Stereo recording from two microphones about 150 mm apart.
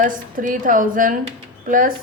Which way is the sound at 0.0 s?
65° right (ahead or behind).